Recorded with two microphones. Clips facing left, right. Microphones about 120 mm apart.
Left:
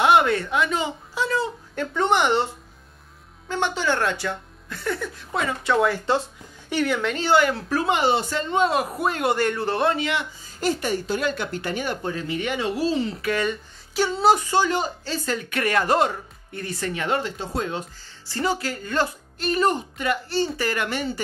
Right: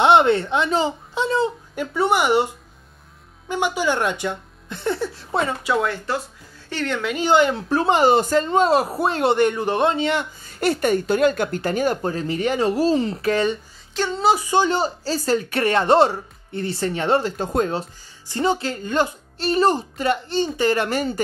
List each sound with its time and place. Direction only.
0.0 s a sound: 25° right (ahead or behind)
1.8 s speech: 10° right (ahead or behind); by 5.6 s 30° right (ahead or behind)
5.6 s speech: 10° right (ahead or behind)
6.1 s speech: 25° left (ahead or behind)
6.7 s a woman's voice: 10° left (ahead or behind)
7.2 s speech: 20° right (ahead or behind)
8.0 s speech: 45° right (ahead or behind); by 10.0 s 20° right (ahead or behind)
10.4 s speech: 60° right (ahead or behind); by 13.6 s 30° right (ahead or behind)
13.9 s speech: 5° left (ahead or behind)
14.4 s speech: 15° right (ahead or behind)
14.7 s speech: 35° right (ahead or behind)
17.4 s speech: 50° right (ahead or behind)
18.2 s speech: 20° right (ahead or behind)
20.2 s speech: 20° right (ahead or behind); by 21.2 s 40° right (ahead or behind)